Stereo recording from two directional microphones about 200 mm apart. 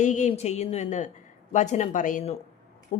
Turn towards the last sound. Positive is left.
turn(degrees=35)  # may be behind; listen again after turning